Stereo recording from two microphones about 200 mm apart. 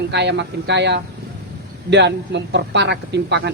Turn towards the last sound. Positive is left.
turn(degrees=-60)  # may be behind; listen again after turning